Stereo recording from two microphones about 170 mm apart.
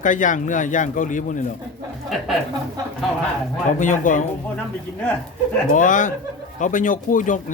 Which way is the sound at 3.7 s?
50° left (ahead or behind).